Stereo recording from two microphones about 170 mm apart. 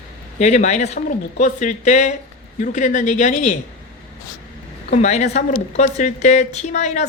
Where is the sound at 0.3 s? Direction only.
45° left (ahead or behind).